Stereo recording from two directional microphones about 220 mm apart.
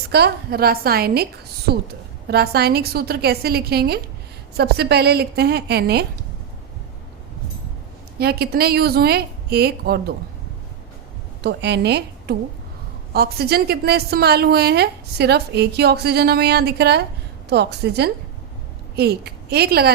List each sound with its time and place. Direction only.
0.1 s a woman's voice: 45° right (ahead or behind)
8.2 s a woman's voice: 45° right (ahead or behind)
11.4 s a woman's voice: 50° right (ahead or behind)